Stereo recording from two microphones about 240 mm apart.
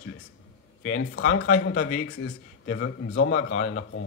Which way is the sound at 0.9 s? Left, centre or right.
Left.